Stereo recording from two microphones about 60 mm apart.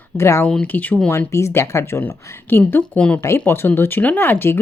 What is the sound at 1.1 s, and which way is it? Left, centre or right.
Speech, left.